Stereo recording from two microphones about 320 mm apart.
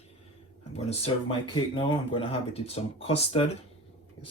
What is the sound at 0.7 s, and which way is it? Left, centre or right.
Speech, centre.